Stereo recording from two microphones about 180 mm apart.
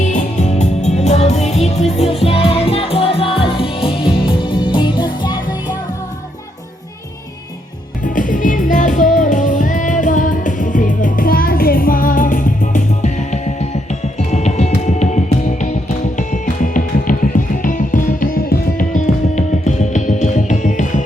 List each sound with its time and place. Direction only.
0.0 s music: 40° left (ahead or behind); by 5.7 s 25° left (ahead or behind)
8.0 s music: 45° left (ahead or behind)